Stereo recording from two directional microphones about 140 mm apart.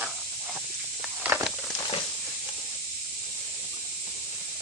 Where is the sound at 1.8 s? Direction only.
30° left (ahead or behind).